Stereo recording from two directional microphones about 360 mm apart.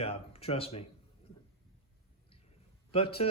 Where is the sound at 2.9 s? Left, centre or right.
Centre.